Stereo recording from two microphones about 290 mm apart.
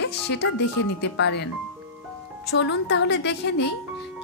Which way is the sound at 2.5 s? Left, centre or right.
Left.